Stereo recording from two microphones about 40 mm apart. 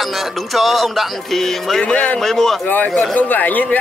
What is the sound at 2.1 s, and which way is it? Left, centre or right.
Speech, centre.